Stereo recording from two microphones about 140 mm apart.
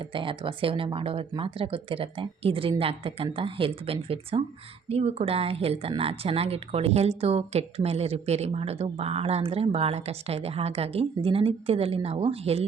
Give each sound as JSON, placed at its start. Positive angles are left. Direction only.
{"t": 0.1, "sound": "speech", "side_deg": -40}